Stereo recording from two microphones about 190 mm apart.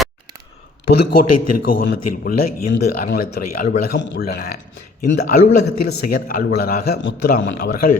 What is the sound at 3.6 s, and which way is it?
Speech, 55° left (ahead or behind).